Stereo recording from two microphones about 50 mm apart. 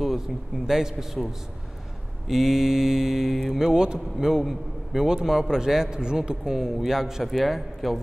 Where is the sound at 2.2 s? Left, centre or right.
Centre.